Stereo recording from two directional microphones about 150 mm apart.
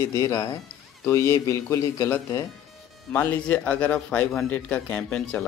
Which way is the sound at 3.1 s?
10° left (ahead or behind).